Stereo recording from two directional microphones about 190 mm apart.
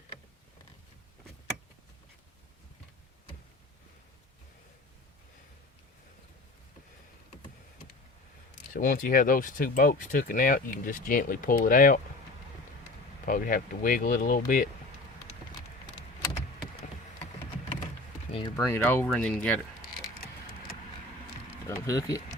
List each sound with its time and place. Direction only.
8.7 s speech: 45° left (ahead or behind)
13.2 s speech: 45° left (ahead or behind)
18.3 s a sound: 30° left (ahead or behind)
18.5 s speech: 15° left (ahead or behind)
21.8 s speech: 15° left (ahead or behind)